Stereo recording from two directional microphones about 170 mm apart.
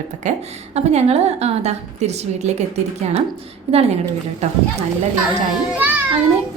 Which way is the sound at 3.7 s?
40° right (ahead or behind).